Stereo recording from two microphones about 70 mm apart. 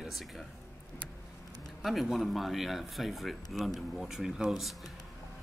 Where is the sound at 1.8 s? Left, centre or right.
Centre.